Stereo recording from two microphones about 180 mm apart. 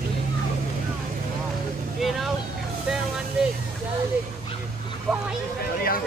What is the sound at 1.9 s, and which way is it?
Vehicle, centre (ahead or behind).